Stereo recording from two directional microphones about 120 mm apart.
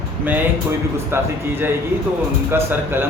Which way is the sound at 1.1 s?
20° right (ahead or behind).